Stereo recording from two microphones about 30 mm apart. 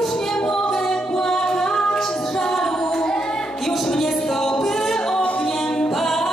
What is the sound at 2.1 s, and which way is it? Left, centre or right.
Music, left.